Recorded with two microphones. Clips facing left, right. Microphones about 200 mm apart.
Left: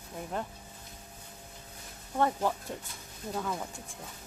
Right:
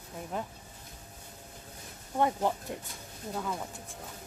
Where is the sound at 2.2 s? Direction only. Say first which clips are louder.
Even; 15° right (ahead or behind).